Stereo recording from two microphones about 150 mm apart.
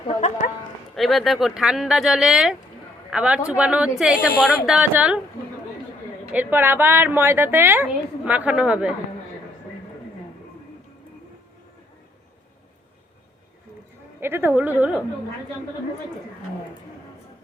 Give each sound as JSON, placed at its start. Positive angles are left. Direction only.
{"t": 0.1, "sound": "speech", "side_deg": 50}
{"t": 0.9, "sound": "a woman's voice", "side_deg": 0}
{"t": 6.3, "sound": "a woman's voice", "side_deg": -10}
{"t": 14.2, "sound": "a woman's voice", "side_deg": -15}